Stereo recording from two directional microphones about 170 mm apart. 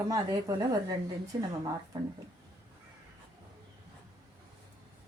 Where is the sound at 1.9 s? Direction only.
25° right (ahead or behind).